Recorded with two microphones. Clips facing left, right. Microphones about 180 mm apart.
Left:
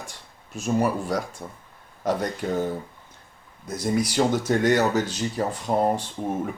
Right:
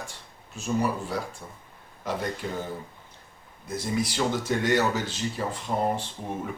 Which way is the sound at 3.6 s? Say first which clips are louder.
Left 4 dB; 40° left (ahead or behind).